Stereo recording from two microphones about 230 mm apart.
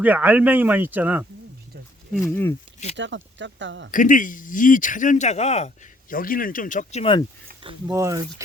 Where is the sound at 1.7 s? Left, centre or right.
Right.